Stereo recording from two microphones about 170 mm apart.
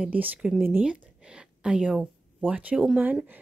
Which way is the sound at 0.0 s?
10° right (ahead or behind).